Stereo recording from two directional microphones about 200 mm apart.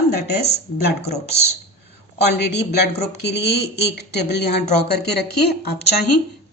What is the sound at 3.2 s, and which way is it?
Speech, 60° left (ahead or behind).